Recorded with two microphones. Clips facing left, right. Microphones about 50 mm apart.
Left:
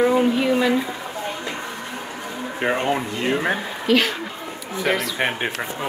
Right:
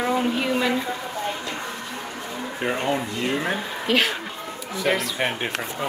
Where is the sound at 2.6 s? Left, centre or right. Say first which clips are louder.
Left 3 dB; left.